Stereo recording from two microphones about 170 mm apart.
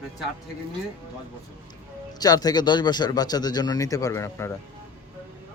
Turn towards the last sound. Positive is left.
turn(degrees=15)  # may be behind; listen again after turning